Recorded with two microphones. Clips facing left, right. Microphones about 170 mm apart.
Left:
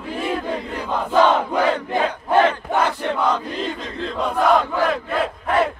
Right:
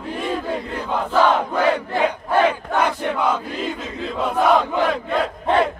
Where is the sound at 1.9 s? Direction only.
20° left (ahead or behind).